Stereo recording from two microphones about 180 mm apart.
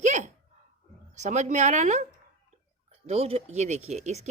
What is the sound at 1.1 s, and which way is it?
Speech, 40° right (ahead or behind).